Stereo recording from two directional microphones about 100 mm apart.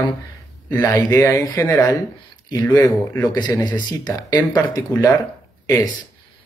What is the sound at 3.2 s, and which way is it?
Speech, 45° left (ahead or behind).